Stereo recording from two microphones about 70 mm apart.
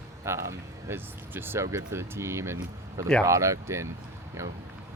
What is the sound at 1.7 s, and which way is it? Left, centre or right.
Speech, right.